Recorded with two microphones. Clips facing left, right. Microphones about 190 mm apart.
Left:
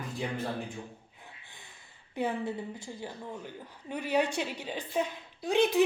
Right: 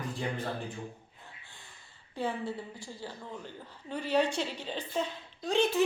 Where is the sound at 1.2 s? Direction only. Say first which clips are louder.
Left 1 dB; 15° left (ahead or behind).